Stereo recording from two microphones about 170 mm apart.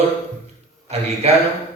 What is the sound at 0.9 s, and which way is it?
Speech, 40° right (ahead or behind).